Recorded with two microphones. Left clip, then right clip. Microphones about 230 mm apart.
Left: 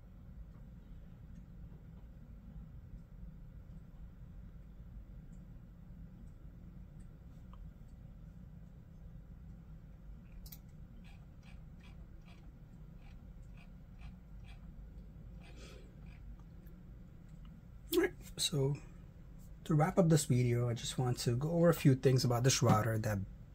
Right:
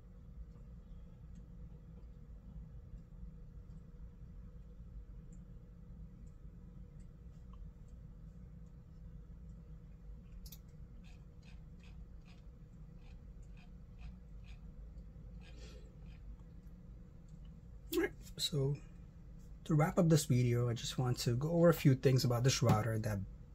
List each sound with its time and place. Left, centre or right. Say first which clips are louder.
17.8 s a sound: left 4 dB; centre
19.6 s speech: left 2 dB; centre
22.4 s speech: left 3 dB; centre